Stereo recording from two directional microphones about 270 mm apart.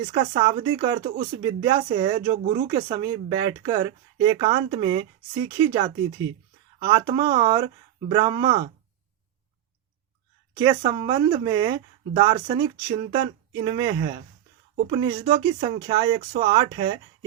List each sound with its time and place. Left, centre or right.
0.1 s speech: centre
10.5 s speech: centre